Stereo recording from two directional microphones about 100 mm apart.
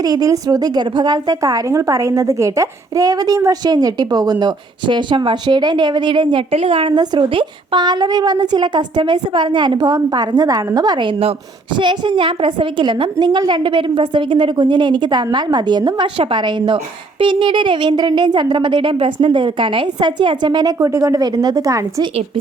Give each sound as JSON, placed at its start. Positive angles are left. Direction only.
{"t": 0.0, "sound": "a woman's voice", "side_deg": -40}
{"t": 1.4, "sound": "a woman's voice", "side_deg": -35}
{"t": 6.5, "sound": "a woman's voice", "side_deg": -80}
{"t": 6.9, "sound": "a woman's voice", "side_deg": -45}